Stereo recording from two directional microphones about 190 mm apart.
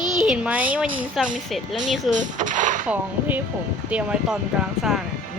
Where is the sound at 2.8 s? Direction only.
10° right (ahead or behind).